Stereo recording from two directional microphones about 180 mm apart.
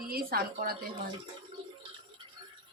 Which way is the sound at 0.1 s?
55° right (ahead or behind).